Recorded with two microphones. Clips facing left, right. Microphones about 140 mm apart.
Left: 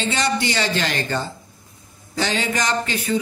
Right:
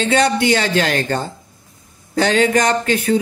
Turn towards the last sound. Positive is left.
turn(degrees=-55)  # may be behind; listen again after turning